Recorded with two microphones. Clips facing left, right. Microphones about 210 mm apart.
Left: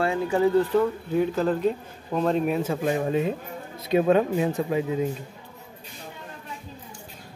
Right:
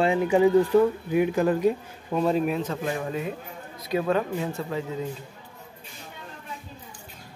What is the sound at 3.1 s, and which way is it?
Speech, 25° left (ahead or behind).